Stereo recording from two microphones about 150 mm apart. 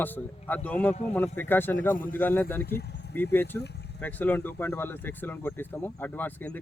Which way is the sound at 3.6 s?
90° left.